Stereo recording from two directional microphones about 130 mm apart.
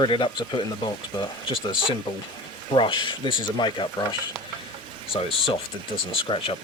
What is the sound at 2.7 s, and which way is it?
Speech, 40° left (ahead or behind).